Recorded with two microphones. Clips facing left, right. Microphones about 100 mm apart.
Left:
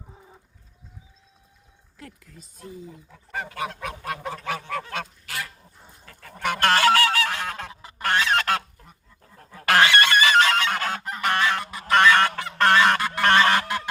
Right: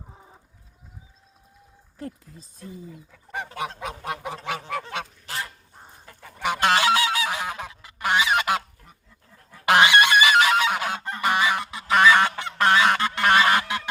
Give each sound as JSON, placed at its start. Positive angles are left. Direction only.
{"t": 2.0, "sound": "speech", "side_deg": -30}
{"t": 2.6, "sound": "speech", "side_deg": 40}
{"t": 3.3, "sound": "goose", "side_deg": -25}
{"t": 6.1, "sound": "goose", "side_deg": -15}
{"t": 7.7, "sound": "goose", "side_deg": 30}
{"t": 8.0, "sound": "goose", "side_deg": -10}
{"t": 9.6, "sound": "goose", "side_deg": -15}